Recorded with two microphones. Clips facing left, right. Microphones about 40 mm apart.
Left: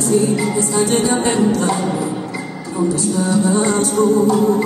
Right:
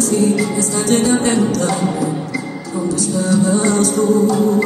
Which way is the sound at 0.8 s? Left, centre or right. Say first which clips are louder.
Right 2 dB; centre.